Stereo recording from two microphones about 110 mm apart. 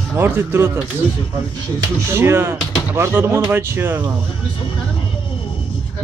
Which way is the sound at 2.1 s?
25° right (ahead or behind).